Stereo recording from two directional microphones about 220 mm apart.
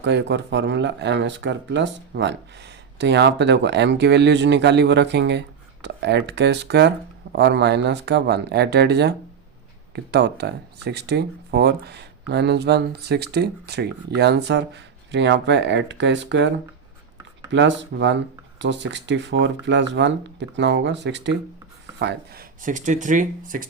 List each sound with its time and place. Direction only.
0.0 s speech: 50° right (ahead or behind)
17.5 s speech: 55° right (ahead or behind); by 23.6 s 35° right (ahead or behind)